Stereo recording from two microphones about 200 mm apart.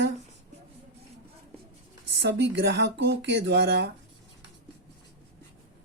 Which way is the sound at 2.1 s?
60° right (ahead or behind).